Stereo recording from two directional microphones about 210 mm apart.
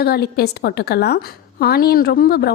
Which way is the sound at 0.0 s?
50° left (ahead or behind).